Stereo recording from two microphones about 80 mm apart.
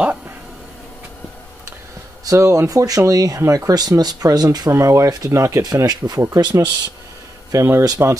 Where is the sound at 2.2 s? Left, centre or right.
Right.